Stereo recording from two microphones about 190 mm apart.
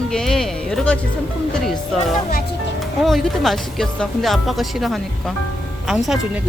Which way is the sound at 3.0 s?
Centre (ahead or behind).